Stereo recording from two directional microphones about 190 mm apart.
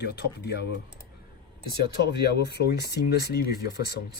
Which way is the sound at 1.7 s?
60° left (ahead or behind).